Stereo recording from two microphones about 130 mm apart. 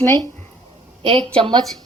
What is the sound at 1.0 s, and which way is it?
Speech, 45° right (ahead or behind).